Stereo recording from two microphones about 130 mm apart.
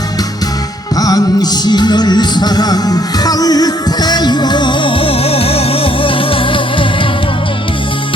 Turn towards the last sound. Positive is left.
turn(degrees=40)  # may be behind; listen again after turning